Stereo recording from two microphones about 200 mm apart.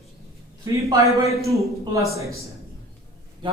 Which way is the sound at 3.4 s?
25° right (ahead or behind).